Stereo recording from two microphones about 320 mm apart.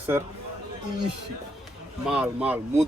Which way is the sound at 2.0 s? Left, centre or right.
Centre.